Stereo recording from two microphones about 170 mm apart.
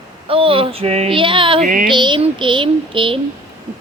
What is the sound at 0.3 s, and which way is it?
Speech, 35° right (ahead or behind).